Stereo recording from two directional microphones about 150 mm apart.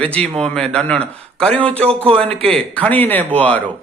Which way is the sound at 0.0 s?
10° left (ahead or behind).